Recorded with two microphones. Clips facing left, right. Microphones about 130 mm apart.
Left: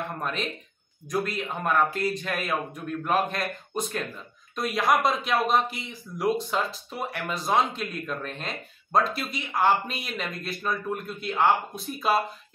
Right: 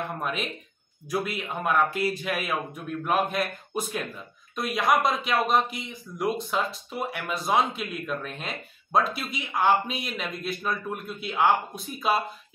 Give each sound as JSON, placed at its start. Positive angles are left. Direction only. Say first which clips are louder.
{"t": 0.2, "sound": "speech", "louder": "even", "side_deg": -5}